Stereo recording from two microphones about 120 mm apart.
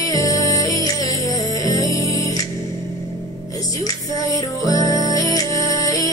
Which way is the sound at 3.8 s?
30° left (ahead or behind).